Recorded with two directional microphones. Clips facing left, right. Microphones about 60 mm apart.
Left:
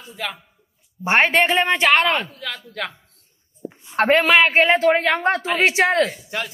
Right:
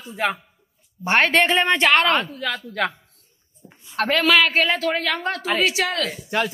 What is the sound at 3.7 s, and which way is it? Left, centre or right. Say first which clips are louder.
A woman's voice: left 5 dB; left.